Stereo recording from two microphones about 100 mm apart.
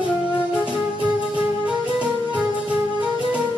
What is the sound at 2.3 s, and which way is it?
Music, 15° right (ahead or behind).